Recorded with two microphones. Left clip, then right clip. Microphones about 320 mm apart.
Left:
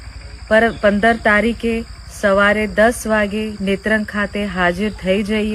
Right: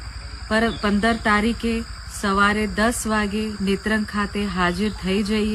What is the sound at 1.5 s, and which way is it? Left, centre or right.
Speech, right.